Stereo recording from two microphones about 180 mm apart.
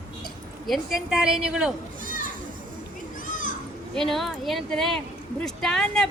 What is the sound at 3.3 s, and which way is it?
Children playing, 50° left (ahead or behind).